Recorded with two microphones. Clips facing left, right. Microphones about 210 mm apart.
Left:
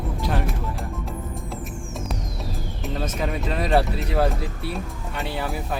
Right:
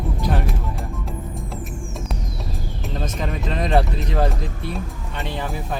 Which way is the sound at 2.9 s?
5° left (ahead or behind).